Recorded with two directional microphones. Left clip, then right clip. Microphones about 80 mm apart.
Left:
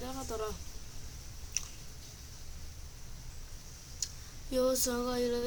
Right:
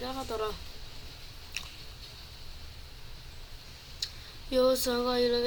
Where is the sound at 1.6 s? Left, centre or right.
Centre.